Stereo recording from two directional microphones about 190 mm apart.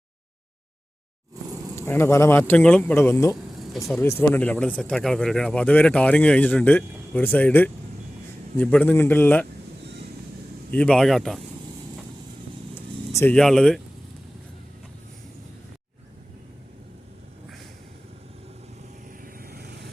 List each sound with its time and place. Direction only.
1.7 s speech: 10° left (ahead or behind)
10.7 s a man's voice: 5° left (ahead or behind)
12.7 s speech: 10° left (ahead or behind)
19.2 s vehicle: 50° right (ahead or behind)